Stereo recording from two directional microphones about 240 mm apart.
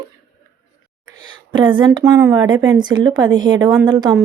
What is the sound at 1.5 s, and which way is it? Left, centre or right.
A woman's voice, centre.